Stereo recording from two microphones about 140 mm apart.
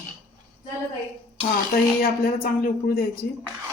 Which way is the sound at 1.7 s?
90° left.